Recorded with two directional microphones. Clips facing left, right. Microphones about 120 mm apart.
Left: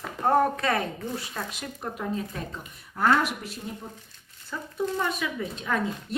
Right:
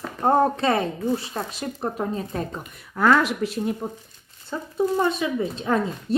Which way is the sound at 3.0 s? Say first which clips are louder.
Right 4 dB; 90° right.